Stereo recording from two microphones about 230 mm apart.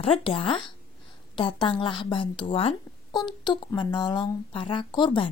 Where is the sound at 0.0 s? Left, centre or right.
Left.